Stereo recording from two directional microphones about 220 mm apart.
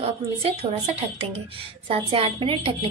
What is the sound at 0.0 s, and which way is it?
A woman's voice, 25° right (ahead or behind).